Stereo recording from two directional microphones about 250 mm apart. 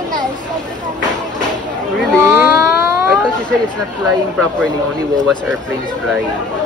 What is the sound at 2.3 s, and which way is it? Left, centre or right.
Speech, centre.